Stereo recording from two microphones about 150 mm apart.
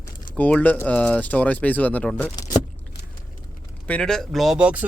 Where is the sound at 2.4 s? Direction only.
25° left (ahead or behind).